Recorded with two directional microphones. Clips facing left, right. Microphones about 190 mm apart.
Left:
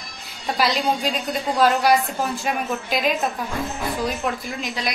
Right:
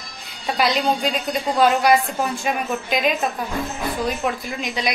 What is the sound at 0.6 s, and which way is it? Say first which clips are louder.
A woman's voice: right 2 dB; centre (ahead or behind).